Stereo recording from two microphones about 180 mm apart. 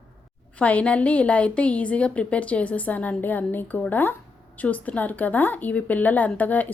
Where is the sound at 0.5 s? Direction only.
5° left (ahead or behind).